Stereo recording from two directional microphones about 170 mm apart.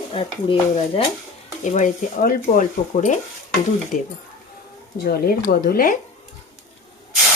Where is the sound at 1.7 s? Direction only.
50° left (ahead or behind).